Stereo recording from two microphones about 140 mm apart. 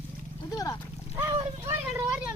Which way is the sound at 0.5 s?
25° left (ahead or behind).